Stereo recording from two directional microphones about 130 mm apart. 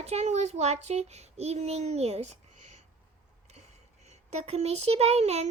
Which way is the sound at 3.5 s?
55° right (ahead or behind).